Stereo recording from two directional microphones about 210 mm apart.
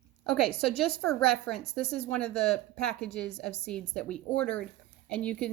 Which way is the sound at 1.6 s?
30° left (ahead or behind).